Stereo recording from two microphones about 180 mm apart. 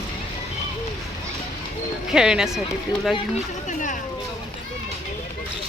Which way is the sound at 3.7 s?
45° left (ahead or behind).